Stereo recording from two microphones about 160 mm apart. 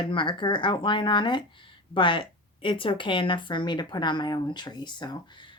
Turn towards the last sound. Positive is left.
turn(degrees=30)  # may be behind; listen again after turning